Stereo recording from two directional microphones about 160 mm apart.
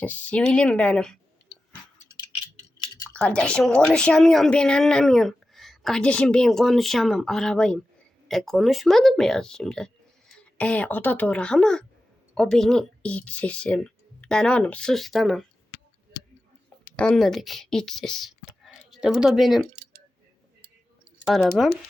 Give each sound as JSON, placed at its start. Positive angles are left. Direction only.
{"t": 0.0, "sound": "a woman's voice", "side_deg": 10}
{"t": 2.7, "sound": "typing", "side_deg": 30}
{"t": 3.1, "sound": "a woman's voice", "side_deg": 5}
{"t": 16.8, "sound": "speech", "side_deg": 5}
{"t": 21.2, "sound": "a woman's voice", "side_deg": 0}